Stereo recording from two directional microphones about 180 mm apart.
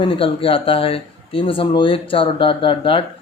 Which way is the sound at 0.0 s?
30° left (ahead or behind).